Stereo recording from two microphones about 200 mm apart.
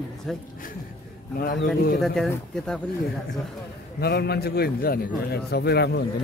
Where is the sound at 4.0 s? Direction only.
55° left (ahead or behind).